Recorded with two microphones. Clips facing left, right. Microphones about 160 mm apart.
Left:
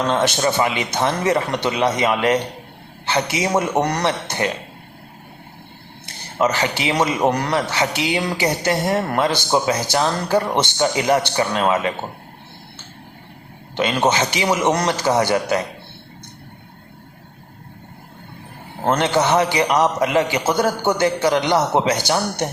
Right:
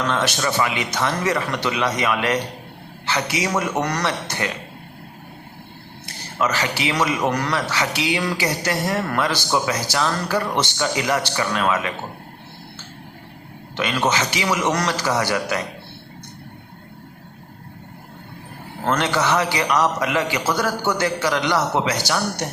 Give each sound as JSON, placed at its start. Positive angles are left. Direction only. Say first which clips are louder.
{"t": 0.0, "sound": "a man's voice", "louder": "left 4 dB", "side_deg": 25}
{"t": 6.4, "sound": "a man's voice", "louder": "left 3 dB", "side_deg": 20}
{"t": 13.7, "sound": "a man's voice", "louder": "left 3 dB", "side_deg": 25}
{"t": 18.8, "sound": "a man's voice", "louder": "left 3 dB", "side_deg": 20}